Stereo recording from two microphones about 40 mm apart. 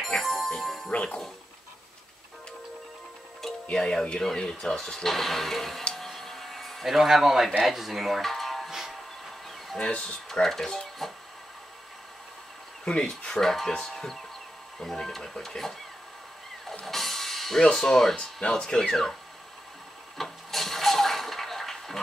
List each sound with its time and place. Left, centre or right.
0.0 s music: centre
3.7 s speech: centre
5.9 s a sound: centre
7.6 s speech: centre
8.3 s music: centre
8.6 s music: centre
9.8 s speech: left
10.4 s speech: centre
13.3 s speech: centre
16.8 s music: centre
17.7 s speech: centre
20.2 s toilet flush: centre